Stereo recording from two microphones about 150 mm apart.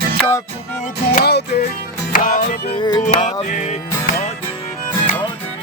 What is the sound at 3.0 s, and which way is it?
Music, 55° left (ahead or behind).